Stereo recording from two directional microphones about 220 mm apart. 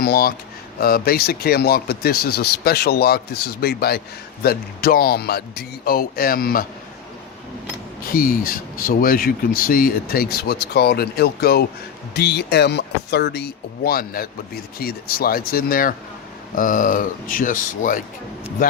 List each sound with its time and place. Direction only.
0.0 s speech: 45° left (ahead or behind)
8.1 s speech: 40° left (ahead or behind)